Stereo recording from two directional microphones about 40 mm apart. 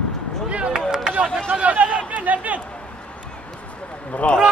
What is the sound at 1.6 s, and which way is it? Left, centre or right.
Speech, right.